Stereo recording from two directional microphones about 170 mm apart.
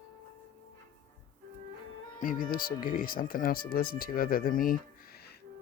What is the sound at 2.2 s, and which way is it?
Speech, 55° left (ahead or behind).